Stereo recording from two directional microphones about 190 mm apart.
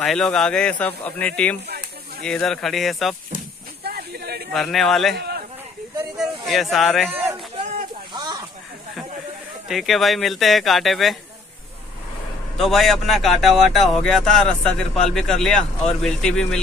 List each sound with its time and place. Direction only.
0.0 s speech: centre (ahead or behind)
3.8 s snake: 55° right (ahead or behind)
4.5 s speech: centre (ahead or behind)
6.1 s speech: centre (ahead or behind)
7.1 s a sound: 10° right (ahead or behind)
9.7 s speech: centre (ahead or behind)
12.5 s speech: centre (ahead or behind)